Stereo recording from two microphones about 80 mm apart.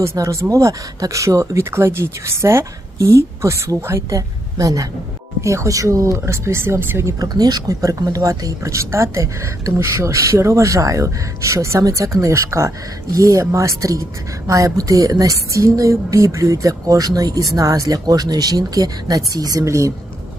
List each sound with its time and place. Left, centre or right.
0.0 s speech: right
4.1 s a woman's voice: right
7.2 s speech: right